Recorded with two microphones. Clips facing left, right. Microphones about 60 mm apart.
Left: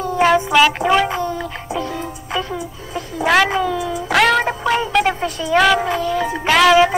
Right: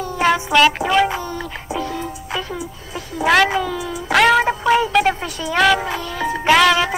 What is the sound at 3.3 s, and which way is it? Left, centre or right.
Speech, centre.